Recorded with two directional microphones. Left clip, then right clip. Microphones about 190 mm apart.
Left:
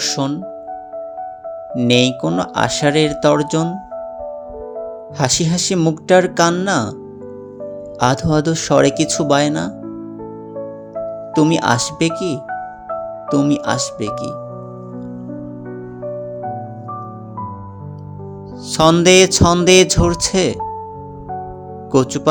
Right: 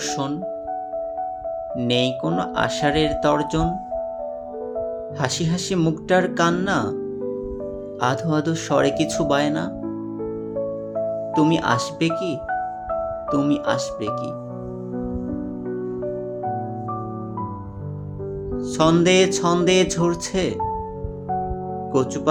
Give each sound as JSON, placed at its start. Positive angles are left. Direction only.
{"t": 0.0, "sound": "music", "side_deg": 35}
{"t": 1.7, "sound": "speech", "side_deg": 35}
{"t": 5.1, "sound": "speech", "side_deg": 35}
{"t": 7.9, "sound": "speech", "side_deg": 35}
{"t": 11.3, "sound": "speech", "side_deg": 35}
{"t": 18.7, "sound": "speech", "side_deg": 45}
{"t": 21.9, "sound": "speech", "side_deg": 45}